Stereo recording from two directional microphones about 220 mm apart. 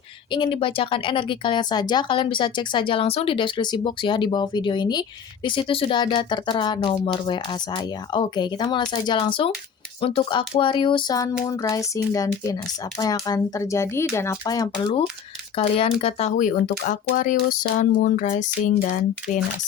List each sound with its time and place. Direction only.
0.3 s speech: 20° left (ahead or behind)
13.0 s speech: 15° left (ahead or behind); by 18.7 s 35° left (ahead or behind)